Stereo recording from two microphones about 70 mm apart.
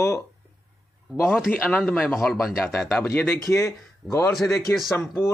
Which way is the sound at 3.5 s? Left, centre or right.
Left.